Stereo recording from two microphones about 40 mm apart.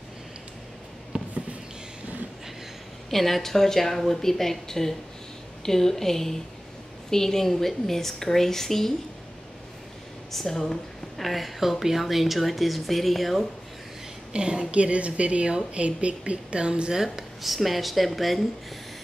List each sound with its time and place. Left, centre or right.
1.1 s a sound: right
3.1 s speech: centre
10.3 s speech: centre
14.3 s speech: right
14.7 s speech: right
16.9 s speech: centre